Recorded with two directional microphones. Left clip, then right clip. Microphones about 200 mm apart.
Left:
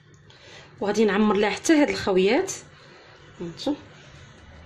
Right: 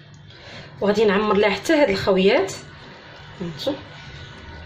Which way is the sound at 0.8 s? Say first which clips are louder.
Right 4 dB; 50° left (ahead or behind).